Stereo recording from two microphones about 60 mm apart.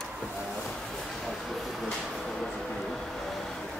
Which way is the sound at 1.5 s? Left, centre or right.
Centre.